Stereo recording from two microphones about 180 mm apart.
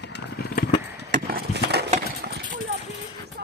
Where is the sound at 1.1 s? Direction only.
55° right (ahead or behind).